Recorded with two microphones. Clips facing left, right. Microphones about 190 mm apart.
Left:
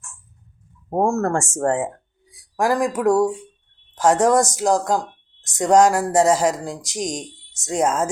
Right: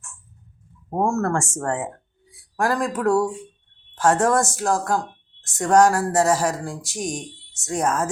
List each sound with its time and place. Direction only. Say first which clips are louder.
0.9 s speech: left 2 dB; 20° left (ahead or behind)